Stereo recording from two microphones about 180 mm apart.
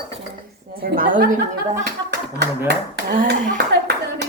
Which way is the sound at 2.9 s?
60° right (ahead or behind).